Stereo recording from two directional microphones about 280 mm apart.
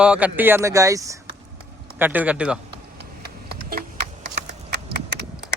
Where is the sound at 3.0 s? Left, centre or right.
Right.